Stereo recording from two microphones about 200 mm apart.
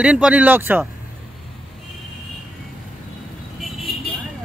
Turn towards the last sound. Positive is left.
turn(degrees=0)  # may be behind; listen again after turning